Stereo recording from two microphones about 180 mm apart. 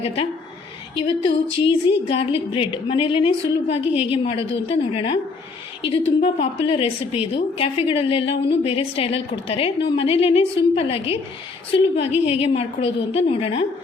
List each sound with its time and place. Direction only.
0.9 s a woman's voice: 30° left (ahead or behind)
6.0 s a woman's voice: 90° left
6.2 s a woman's voice: 30° left (ahead or behind)